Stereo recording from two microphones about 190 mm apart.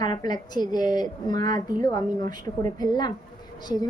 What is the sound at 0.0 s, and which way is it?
A woman's voice, 20° left (ahead or behind).